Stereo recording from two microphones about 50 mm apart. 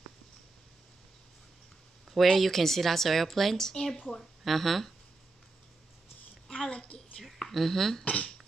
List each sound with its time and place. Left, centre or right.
2.0 s a woman's voice: centre
4.5 s a woman's voice: centre
6.5 s a sound: centre
7.2 s speech: centre
8.0 s speech: left